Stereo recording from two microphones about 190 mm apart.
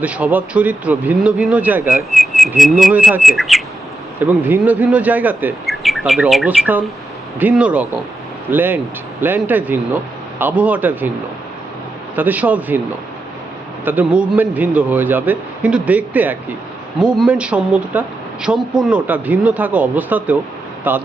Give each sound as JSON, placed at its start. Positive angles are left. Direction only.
{"t": 0.0, "sound": "speech", "side_deg": -10}
{"t": 2.1, "sound": "bird", "side_deg": 0}
{"t": 4.2, "sound": "speech", "side_deg": -10}
{"t": 12.1, "sound": "speech", "side_deg": -10}
{"t": 13.8, "sound": "speech", "side_deg": -10}
{"t": 18.7, "sound": "bird", "side_deg": -5}
{"t": 19.0, "sound": "speech", "side_deg": -10}